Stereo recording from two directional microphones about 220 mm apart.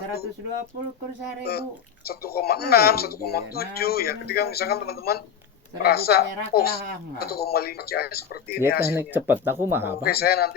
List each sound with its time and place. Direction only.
2.0 s speech: 45° left (ahead or behind)
9.0 s speech: 10° right (ahead or behind)
10.0 s speech: 45° left (ahead or behind)